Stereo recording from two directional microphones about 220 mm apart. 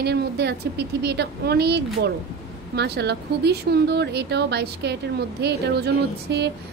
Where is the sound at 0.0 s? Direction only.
50° right (ahead or behind).